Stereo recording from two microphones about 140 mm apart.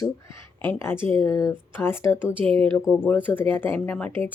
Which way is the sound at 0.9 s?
40° right (ahead or behind).